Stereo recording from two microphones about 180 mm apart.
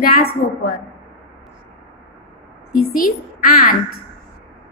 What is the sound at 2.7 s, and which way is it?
A woman's voice, 50° left (ahead or behind).